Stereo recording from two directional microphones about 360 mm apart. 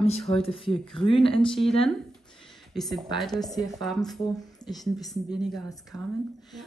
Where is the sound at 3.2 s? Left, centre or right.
Centre.